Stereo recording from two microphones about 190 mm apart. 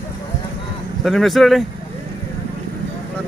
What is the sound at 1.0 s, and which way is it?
Speech, centre (ahead or behind).